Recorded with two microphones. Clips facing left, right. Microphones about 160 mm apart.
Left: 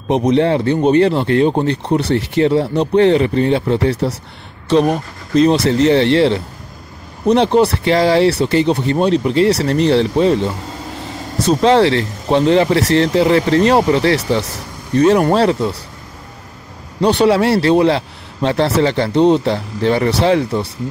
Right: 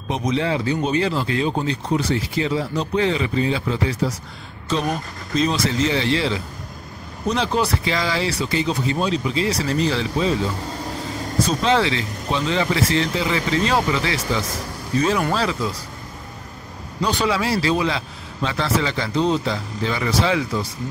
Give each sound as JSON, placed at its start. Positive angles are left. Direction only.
{"t": 0.1, "sound": "speech", "side_deg": 65}
{"t": 7.5, "sound": "speech", "side_deg": 65}
{"t": 17.0, "sound": "speech", "side_deg": 65}